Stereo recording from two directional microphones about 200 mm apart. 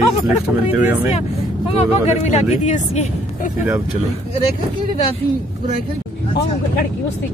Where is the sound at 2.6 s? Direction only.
35° left (ahead or behind).